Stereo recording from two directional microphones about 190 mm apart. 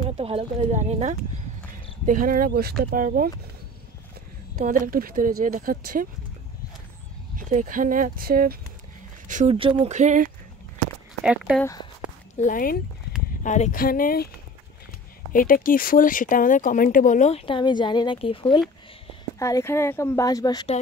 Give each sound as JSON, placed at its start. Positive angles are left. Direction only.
{"t": 0.2, "sound": "speech", "side_deg": -30}
{"t": 4.6, "sound": "speech", "side_deg": -45}
{"t": 7.3, "sound": "speech", "side_deg": -45}
{"t": 9.3, "sound": "speech", "side_deg": -35}
{"t": 9.9, "sound": "speech", "side_deg": -40}
{"t": 11.2, "sound": "speech", "side_deg": 0}
{"t": 11.6, "sound": "speech", "side_deg": 20}
{"t": 12.4, "sound": "speech", "side_deg": 45}
{"t": 15.3, "sound": "speech", "side_deg": 45}
{"t": 19.3, "sound": "speech", "side_deg": 15}